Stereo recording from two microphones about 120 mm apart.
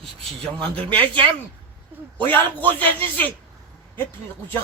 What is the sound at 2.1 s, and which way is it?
A man's voice, 15° left (ahead or behind).